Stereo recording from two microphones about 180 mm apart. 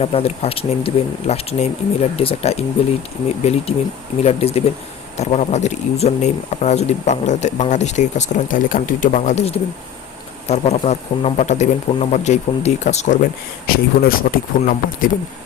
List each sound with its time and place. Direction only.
0.0 s speech: 35° left (ahead or behind)
13.7 s speech: 55° left (ahead or behind)